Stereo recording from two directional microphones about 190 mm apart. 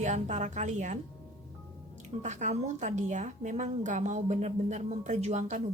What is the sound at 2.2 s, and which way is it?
A woman's voice, 40° right (ahead or behind).